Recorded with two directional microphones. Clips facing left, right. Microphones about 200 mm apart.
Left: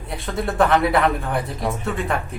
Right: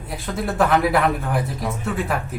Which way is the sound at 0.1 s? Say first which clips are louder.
Left 1 dB; centre (ahead or behind).